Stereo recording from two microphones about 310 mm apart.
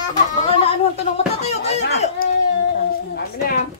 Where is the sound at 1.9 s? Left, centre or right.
Left.